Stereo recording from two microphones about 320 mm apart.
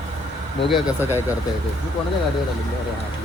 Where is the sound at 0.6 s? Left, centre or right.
Centre.